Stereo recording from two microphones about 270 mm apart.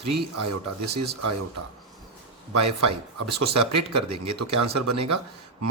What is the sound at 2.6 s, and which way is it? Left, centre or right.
Speech, right.